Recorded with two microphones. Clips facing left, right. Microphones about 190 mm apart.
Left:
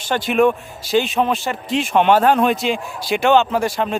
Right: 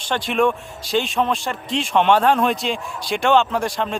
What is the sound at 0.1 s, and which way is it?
Speech, 5° left (ahead or behind).